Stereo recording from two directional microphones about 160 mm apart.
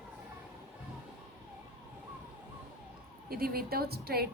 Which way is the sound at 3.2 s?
70° right (ahead or behind).